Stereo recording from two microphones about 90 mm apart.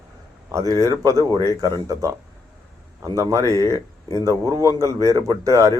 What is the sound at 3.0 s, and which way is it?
A man's voice, 35° right (ahead or behind).